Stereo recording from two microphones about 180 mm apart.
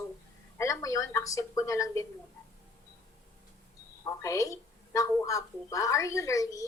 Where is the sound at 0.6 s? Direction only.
20° left (ahead or behind).